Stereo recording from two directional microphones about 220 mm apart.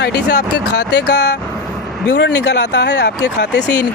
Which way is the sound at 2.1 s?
55° left (ahead or behind).